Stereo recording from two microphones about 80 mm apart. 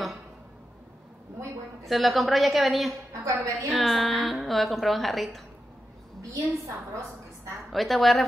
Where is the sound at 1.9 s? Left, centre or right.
Centre.